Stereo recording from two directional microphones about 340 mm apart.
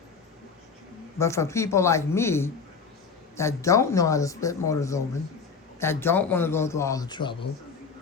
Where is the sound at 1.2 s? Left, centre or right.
Centre.